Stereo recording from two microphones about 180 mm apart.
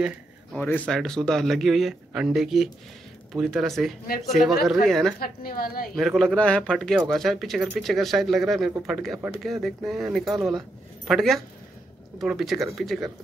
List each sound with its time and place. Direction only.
0.6 s speech: 10° left (ahead or behind)
5.2 s a woman's voice: 55° left (ahead or behind)
5.9 s speech: centre (ahead or behind)